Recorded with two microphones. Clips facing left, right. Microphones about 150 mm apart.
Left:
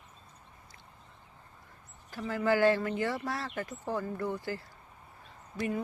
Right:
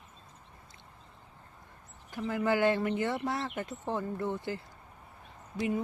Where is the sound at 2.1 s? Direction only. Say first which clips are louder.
Left 1 dB; 20° right (ahead or behind).